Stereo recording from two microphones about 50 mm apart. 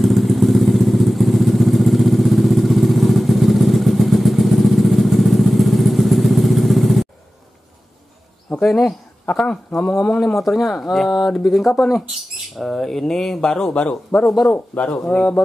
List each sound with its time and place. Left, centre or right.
0.0 s vehicle: centre
8.5 s speech: centre
9.2 s speech: left
10.2 s speech: centre
14.5 s speech: left